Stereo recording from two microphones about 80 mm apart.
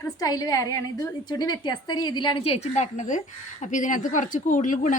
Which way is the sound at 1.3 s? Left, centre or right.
Left.